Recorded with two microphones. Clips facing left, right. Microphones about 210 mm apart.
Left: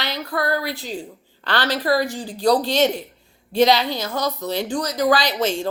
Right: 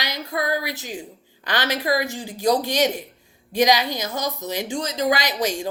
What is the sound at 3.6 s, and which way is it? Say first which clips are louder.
Speech: left 2 dB; 15° right (ahead or behind).